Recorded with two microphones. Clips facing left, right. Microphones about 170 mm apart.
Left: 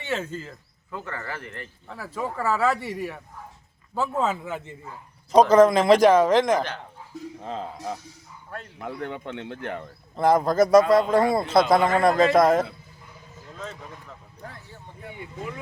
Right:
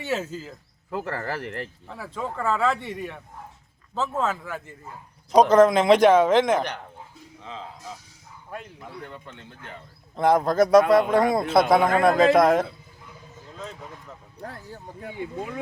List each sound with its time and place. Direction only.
0.1 s a man's voice: 5° right (ahead or behind)
0.9 s speech: 40° right (ahead or behind)
1.4 s speech: 80° right
1.9 s speech: 5° left (ahead or behind)
4.2 s a man's voice: 20° left (ahead or behind)
5.3 s a man's voice: centre (ahead or behind)
7.3 s speech: 50° left (ahead or behind)
8.8 s speech: 70° left (ahead or behind)
10.2 s a man's voice: centre (ahead or behind)
14.4 s speech: 45° right (ahead or behind)